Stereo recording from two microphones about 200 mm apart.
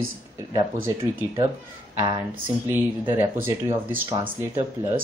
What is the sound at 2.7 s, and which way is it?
Speech, 10° right (ahead or behind).